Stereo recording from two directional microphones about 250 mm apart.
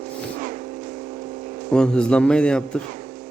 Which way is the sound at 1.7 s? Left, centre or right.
Centre.